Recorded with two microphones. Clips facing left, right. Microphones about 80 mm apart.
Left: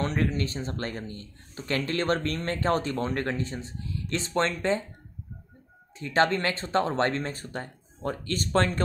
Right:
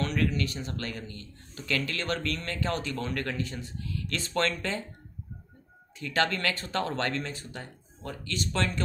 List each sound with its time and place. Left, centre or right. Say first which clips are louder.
0.0 s speech: left 1 dB; left
5.9 s speech: left 4 dB; left